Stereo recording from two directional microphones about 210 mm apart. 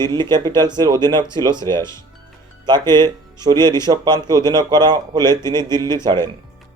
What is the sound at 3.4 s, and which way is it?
Speech, 20° right (ahead or behind).